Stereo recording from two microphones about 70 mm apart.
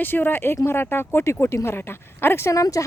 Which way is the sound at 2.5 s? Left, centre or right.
Left.